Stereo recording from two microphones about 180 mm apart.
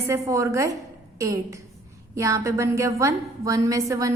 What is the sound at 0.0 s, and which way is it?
A woman's voice, 15° right (ahead or behind).